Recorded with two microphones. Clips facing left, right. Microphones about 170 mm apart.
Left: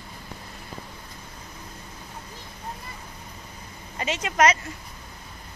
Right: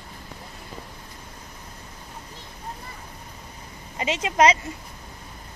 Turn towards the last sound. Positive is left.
turn(degrees=-25)  # may be behind; listen again after turning